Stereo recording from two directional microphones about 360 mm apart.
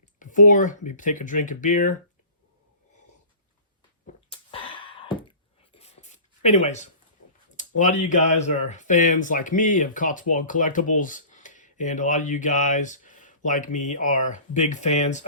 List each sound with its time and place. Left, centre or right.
0.2 s speech: left
4.0 s a sound: centre
5.7 s writing: centre
7.5 s speech: left